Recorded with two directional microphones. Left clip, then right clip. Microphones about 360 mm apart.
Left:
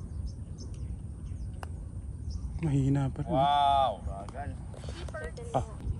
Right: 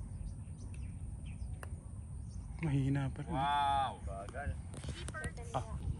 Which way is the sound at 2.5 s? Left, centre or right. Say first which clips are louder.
Left 7 dB; centre.